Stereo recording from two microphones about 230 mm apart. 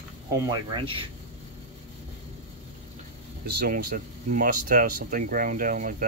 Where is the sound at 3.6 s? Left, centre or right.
Right.